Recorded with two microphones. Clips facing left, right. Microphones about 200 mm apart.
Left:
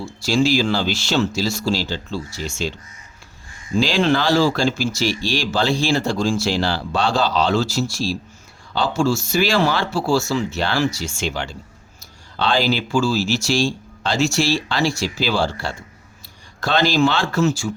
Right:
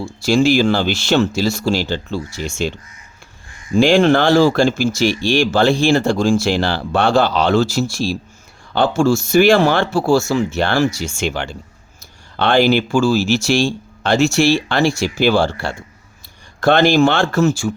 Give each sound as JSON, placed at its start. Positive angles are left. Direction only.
{"t": 0.0, "sound": "speech", "side_deg": -50}
{"t": 3.8, "sound": "speech", "side_deg": -55}